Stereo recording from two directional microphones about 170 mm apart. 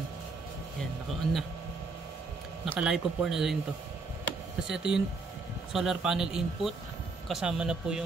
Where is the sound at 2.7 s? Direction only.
5° right (ahead or behind).